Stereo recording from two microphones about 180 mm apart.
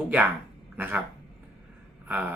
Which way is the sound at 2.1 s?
10° right (ahead or behind).